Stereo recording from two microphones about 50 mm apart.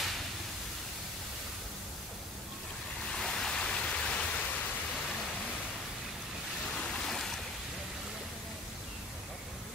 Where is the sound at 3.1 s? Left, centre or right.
Centre.